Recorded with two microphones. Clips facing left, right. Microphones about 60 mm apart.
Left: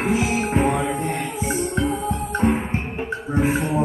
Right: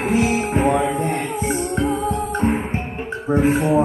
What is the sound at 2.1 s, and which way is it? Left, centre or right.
Music, right.